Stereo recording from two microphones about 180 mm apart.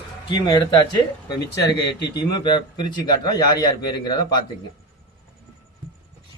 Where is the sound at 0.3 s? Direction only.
25° left (ahead or behind).